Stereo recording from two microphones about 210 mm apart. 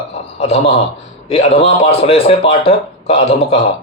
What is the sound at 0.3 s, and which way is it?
A man's voice, 30° left (ahead or behind).